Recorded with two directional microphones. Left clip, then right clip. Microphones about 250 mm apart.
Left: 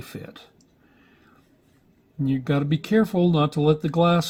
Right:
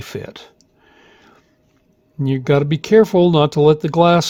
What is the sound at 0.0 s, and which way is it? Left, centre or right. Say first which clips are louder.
Speech: right 10 dB; right.